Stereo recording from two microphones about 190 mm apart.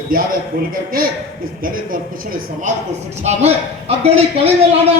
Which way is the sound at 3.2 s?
35° right (ahead or behind).